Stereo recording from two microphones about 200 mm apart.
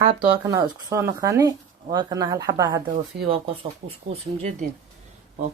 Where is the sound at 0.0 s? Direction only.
25° right (ahead or behind).